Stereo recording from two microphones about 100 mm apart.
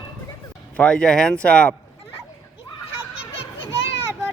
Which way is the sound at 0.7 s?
10° left (ahead or behind).